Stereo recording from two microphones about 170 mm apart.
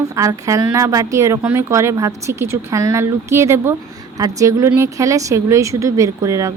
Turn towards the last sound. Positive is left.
turn(degrees=-20)  # may be behind; listen again after turning